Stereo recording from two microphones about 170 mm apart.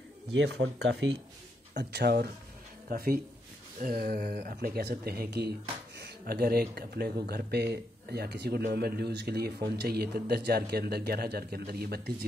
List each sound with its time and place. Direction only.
0.3 s speech: 90° right
1.8 s speech: 75° right (ahead or behind)